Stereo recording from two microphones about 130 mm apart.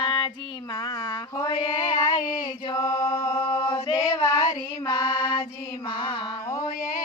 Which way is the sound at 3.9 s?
20° left (ahead or behind).